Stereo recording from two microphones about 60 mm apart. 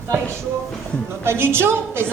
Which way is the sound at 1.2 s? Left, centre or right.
Right.